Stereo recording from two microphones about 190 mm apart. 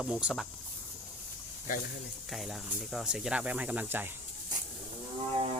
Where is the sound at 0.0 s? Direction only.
5° right (ahead or behind).